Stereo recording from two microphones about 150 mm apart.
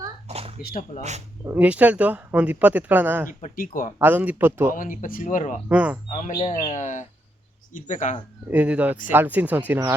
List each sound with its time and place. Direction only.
0.3 s a sound: 40° right (ahead or behind)
0.6 s speech: 75° left (ahead or behind)
1.5 s speech: 10° right (ahead or behind)
3.2 s speech: 70° left (ahead or behind)
3.9 s speech: 10° right (ahead or behind)
4.7 s speech: 60° left (ahead or behind)
5.6 s speech: 10° right (ahead or behind)
6.1 s speech: 50° left (ahead or behind)
8.4 s speech: 10° right (ahead or behind)